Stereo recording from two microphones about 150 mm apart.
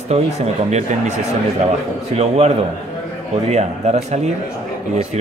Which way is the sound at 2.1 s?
45° right (ahead or behind).